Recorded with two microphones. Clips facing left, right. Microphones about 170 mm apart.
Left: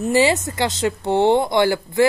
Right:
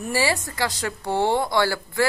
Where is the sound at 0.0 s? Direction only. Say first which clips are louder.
Left 7 dB; 20° left (ahead or behind).